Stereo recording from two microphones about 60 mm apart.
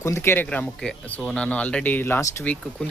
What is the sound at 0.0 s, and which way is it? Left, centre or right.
Speech, left.